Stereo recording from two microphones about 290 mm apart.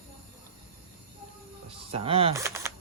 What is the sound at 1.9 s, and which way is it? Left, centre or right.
Speech, centre.